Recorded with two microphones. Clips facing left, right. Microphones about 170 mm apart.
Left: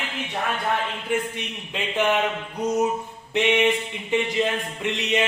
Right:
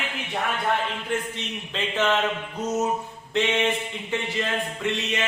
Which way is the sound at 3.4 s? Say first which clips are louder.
Left 3 dB; 15° left (ahead or behind).